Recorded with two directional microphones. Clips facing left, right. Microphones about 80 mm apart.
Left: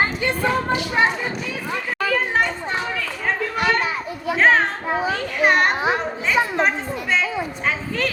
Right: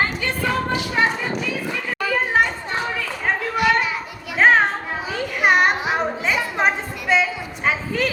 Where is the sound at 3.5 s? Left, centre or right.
Left.